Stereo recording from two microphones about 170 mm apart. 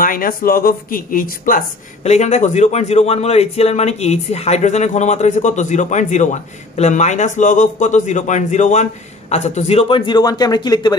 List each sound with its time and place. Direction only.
0.0 s speech: 55° left (ahead or behind)
2.0 s a man's voice: 40° left (ahead or behind); by 11.0 s 25° left (ahead or behind)